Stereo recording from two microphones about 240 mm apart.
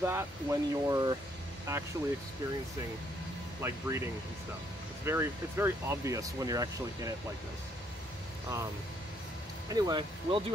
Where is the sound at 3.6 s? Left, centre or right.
Centre.